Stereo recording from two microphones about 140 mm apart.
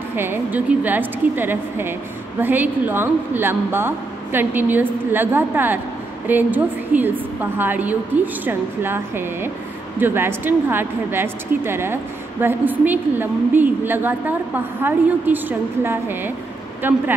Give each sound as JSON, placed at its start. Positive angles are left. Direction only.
{"t": 0.1, "sound": "a woman's voice", "side_deg": -15}